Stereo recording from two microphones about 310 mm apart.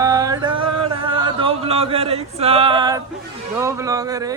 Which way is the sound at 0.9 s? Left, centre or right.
Centre.